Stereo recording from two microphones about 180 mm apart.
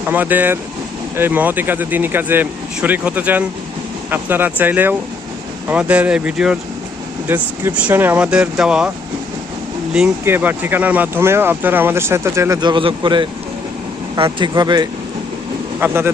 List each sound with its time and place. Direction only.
0.1 s speech: 10° right (ahead or behind)
9.9 s speech: 10° right (ahead or behind); by 13.2 s 25° right (ahead or behind)
14.3 s speech: 25° right (ahead or behind)